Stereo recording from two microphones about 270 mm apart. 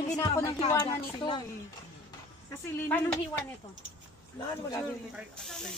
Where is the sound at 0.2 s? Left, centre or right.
Centre.